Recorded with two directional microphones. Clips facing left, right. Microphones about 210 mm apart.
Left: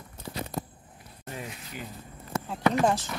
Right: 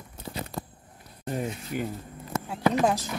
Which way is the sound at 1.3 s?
45° right (ahead or behind).